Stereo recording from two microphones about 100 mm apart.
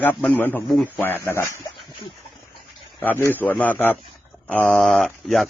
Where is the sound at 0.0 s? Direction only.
15° left (ahead or behind).